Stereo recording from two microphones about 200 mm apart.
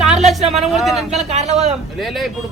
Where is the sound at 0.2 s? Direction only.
35° right (ahead or behind).